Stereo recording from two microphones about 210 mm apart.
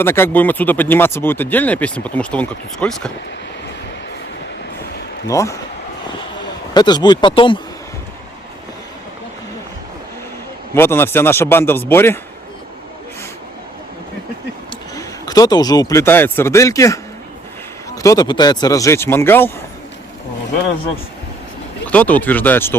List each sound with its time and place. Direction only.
0.0 s speech: 10° left (ahead or behind)
5.3 s speech: 15° left (ahead or behind)
6.7 s speech: 20° left (ahead or behind)
10.8 s speech: 10° left (ahead or behind)
14.9 s speech: 20° left (ahead or behind)
21.8 s speech: 5° left (ahead or behind)